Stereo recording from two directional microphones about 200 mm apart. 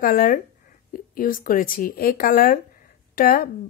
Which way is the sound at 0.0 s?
45° left (ahead or behind).